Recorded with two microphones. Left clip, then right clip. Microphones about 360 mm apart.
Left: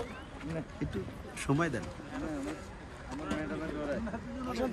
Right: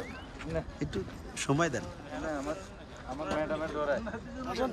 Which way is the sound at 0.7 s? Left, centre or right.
Centre.